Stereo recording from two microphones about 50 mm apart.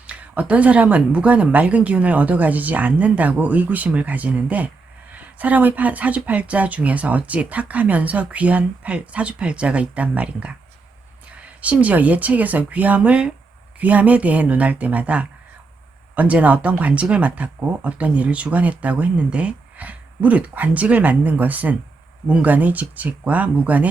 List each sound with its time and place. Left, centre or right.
0.1 s speech: right